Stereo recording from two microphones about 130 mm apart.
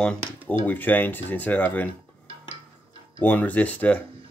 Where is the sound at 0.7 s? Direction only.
15° left (ahead or behind).